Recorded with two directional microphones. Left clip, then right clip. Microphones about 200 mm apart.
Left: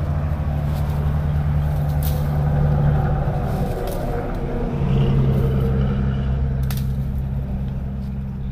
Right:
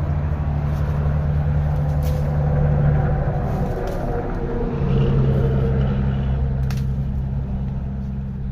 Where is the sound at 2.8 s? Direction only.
10° right (ahead or behind); by 4.1 s 10° left (ahead or behind).